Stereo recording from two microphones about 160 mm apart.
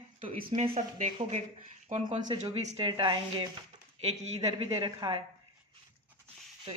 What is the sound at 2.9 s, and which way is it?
Speech, 30° right (ahead or behind).